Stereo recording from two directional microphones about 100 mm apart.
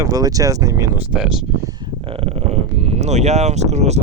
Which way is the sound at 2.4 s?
90° right.